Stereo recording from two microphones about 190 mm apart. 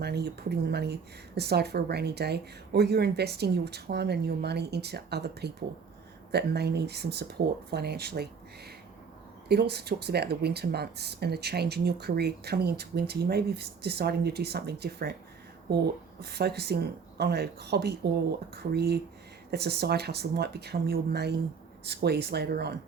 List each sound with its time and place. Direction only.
0.0 s speech: 60° right (ahead or behind)
16.2 s speech: 60° right (ahead or behind)